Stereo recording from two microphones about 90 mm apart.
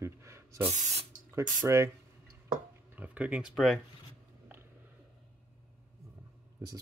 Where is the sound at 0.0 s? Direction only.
30° right (ahead or behind).